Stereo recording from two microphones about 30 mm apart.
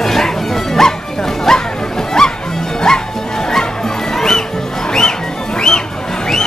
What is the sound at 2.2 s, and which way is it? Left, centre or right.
Music, centre.